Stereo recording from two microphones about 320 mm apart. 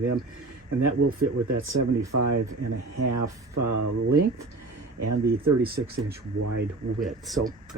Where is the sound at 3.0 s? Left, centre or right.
Right.